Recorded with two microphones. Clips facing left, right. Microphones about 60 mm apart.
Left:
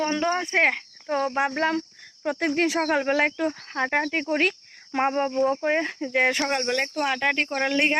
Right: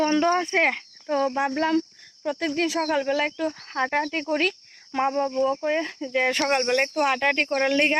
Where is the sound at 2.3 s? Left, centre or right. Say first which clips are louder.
Left 2 dB; left.